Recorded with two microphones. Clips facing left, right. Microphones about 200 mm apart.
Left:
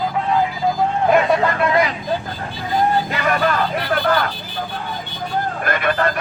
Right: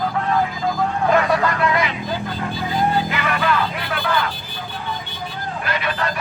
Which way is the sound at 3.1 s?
40° left (ahead or behind).